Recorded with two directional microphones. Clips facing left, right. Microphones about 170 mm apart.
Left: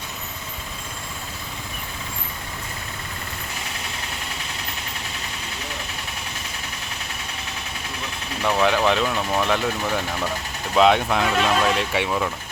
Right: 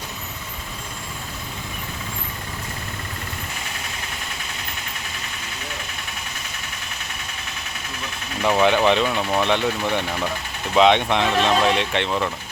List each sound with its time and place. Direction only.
8.4 s speech: centre (ahead or behind)